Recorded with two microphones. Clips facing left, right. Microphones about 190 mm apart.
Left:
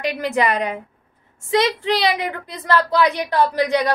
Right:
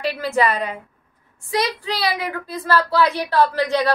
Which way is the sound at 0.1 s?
15° left (ahead or behind).